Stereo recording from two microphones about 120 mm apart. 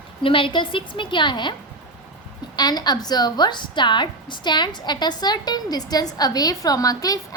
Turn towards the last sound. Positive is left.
turn(degrees=30)  # may be behind; listen again after turning